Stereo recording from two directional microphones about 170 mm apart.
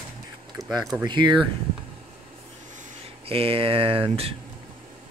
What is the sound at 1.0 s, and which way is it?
Speech, 25° right (ahead or behind).